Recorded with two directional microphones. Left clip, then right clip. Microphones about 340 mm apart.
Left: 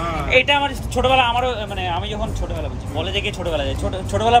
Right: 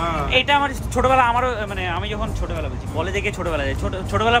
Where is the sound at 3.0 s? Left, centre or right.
Centre.